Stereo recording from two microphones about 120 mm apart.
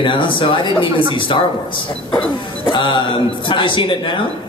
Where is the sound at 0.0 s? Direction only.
45° left (ahead or behind).